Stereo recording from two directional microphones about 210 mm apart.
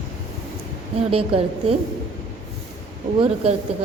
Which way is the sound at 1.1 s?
25° right (ahead or behind).